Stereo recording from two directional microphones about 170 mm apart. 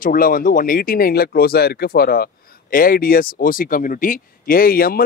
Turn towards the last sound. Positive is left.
turn(degrees=60)  # may be behind; listen again after turning